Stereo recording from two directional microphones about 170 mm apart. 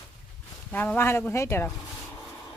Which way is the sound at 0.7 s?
10° left (ahead or behind).